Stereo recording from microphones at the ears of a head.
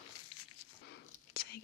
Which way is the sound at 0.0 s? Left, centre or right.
Left.